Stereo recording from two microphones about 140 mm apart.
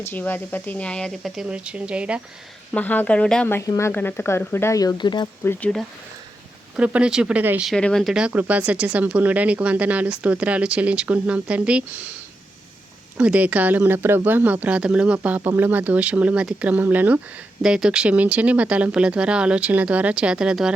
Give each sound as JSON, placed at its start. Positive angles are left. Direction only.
{"t": 0.0, "sound": "speech", "side_deg": 15}
{"t": 2.7, "sound": "speech", "side_deg": 10}
{"t": 3.5, "sound": "speech", "side_deg": 20}
{"t": 5.4, "sound": "speech", "side_deg": 15}
{"t": 6.7, "sound": "speech", "side_deg": -10}
{"t": 7.7, "sound": "speech", "side_deg": 5}
{"t": 13.1, "sound": "speech", "side_deg": -10}